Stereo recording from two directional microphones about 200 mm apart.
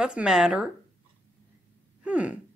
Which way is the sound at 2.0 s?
5° right (ahead or behind).